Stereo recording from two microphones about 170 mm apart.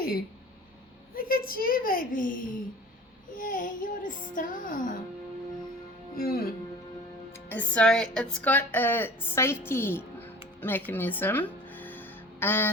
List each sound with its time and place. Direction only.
1.1 s a child's voice: 60° left (ahead or behind)
3.3 s music: 50° left (ahead or behind)
6.1 s speech: 60° left (ahead or behind)
7.3 s a child's voice: 10° left (ahead or behind)
10.6 s music: 10° left (ahead or behind)